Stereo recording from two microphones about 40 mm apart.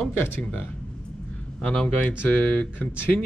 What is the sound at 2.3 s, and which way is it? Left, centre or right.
Speech, left.